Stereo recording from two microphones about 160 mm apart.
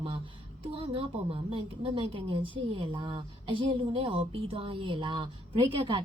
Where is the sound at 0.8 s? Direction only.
35° right (ahead or behind).